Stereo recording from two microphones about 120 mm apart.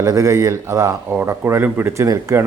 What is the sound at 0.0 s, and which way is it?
Speech, 30° right (ahead or behind).